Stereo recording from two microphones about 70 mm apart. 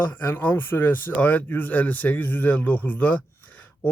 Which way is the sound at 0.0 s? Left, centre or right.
Left.